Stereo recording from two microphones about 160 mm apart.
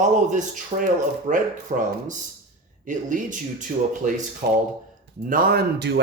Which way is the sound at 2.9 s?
55° right (ahead or behind).